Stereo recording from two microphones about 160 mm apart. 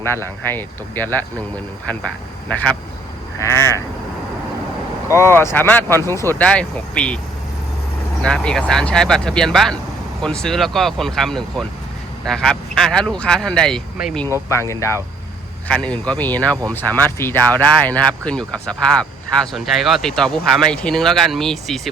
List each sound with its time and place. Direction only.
0.0 s speech: 15° left (ahead or behind)
2.5 s speech: 10° left (ahead or behind)
3.3 s sheep: 15° left (ahead or behind)
5.1 s speech: 15° left (ahead or behind)
8.2 s speech: 5° left (ahead or behind)
14.5 s speech: 20° left (ahead or behind)
15.6 s speech: 5° left (ahead or behind)